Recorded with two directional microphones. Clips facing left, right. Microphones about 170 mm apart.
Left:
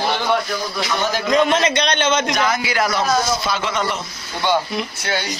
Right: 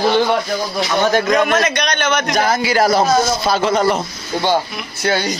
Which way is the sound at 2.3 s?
35° right (ahead or behind).